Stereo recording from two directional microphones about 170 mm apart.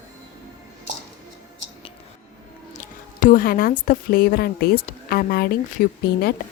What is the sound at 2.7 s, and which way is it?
A woman's voice, 50° left (ahead or behind).